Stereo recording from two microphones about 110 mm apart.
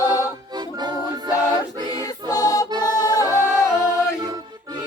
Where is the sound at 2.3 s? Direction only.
35° left (ahead or behind).